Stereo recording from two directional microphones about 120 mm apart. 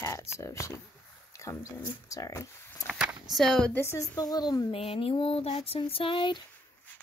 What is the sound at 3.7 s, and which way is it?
A woman's voice, 20° left (ahead or behind).